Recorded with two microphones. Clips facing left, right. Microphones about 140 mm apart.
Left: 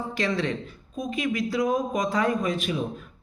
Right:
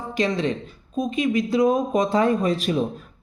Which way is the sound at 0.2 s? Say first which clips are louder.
Right 5 dB; 20° right (ahead or behind).